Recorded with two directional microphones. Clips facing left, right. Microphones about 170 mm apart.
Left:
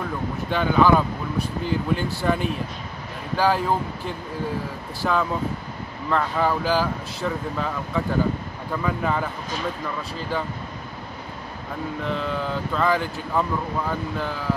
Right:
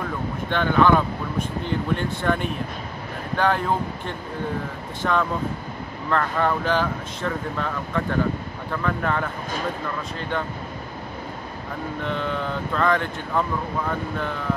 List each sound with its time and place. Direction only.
0.5 s speech: 5° left (ahead or behind)
12.0 s speech: centre (ahead or behind)